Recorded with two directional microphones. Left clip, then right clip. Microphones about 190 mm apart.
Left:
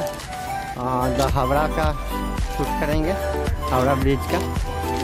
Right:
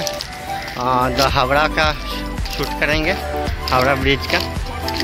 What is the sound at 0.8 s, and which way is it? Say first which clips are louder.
Speech: right 6 dB; centre (ahead or behind).